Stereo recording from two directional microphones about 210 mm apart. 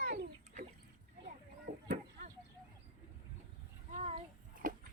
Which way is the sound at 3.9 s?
30° right (ahead or behind).